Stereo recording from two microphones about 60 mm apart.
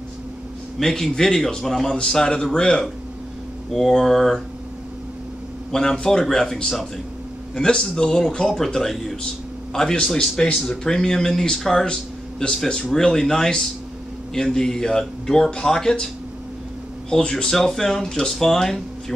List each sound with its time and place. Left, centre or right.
0.7 s speech: centre
5.7 s speech: centre
17.1 s speech: centre